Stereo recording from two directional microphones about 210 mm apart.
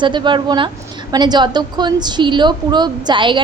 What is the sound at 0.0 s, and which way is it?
A woman's voice, 20° right (ahead or behind).